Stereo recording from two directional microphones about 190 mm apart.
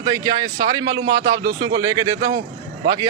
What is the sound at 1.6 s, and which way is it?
Speech, 20° right (ahead or behind).